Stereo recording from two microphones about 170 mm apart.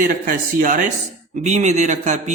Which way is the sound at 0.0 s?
55° right (ahead or behind).